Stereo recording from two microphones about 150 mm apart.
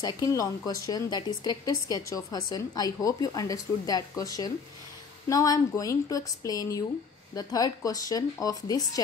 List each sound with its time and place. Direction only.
0.0 s speech: 25° left (ahead or behind)